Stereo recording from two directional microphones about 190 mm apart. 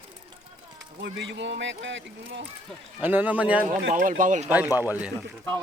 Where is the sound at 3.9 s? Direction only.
40° right (ahead or behind).